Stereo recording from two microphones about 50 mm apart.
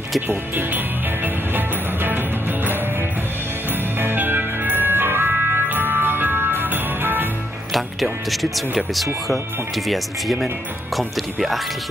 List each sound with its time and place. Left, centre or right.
0.3 s music: right
7.7 s speech: centre